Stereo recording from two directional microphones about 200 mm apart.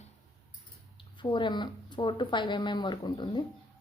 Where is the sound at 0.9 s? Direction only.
25° left (ahead or behind).